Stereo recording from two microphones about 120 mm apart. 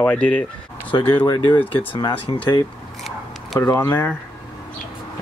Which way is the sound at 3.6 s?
20° left (ahead or behind).